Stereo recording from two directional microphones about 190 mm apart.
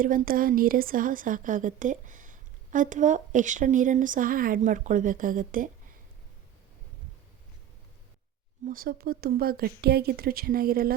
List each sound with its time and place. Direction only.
0.0 s a woman's voice: 45° right (ahead or behind)
8.6 s a woman's voice: 50° right (ahead or behind)